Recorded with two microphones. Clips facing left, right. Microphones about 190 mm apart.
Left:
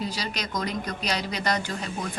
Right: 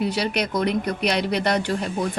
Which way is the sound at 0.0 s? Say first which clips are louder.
Right 8 dB; 65° right (ahead or behind).